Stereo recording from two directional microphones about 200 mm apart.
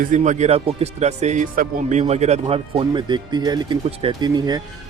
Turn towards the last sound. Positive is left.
turn(degrees=-20)  # may be behind; listen again after turning